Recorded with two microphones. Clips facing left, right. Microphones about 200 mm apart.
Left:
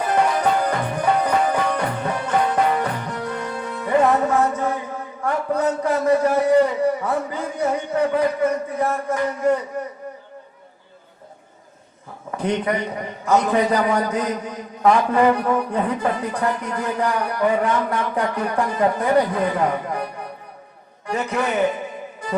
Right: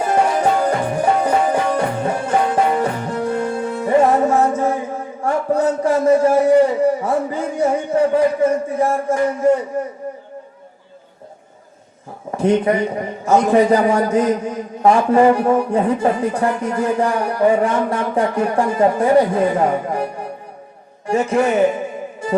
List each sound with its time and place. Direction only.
0.0 s music: 25° right (ahead or behind)
4.2 s a sound: 25° right (ahead or behind)
5.2 s a man's voice: 25° right (ahead or behind)
12.3 s a man's voice: 25° right (ahead or behind)